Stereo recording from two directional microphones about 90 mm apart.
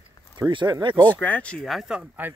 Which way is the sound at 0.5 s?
60° right (ahead or behind).